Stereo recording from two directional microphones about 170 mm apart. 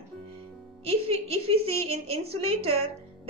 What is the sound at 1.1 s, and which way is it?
A woman's voice, 35° right (ahead or behind).